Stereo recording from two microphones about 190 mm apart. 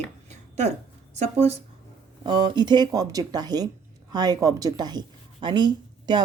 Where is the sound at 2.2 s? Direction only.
25° right (ahead or behind).